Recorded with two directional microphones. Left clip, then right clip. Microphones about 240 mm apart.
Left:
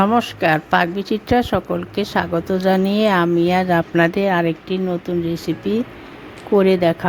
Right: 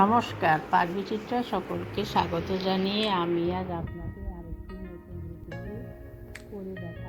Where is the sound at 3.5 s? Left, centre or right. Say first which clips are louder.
Left 15 dB; left.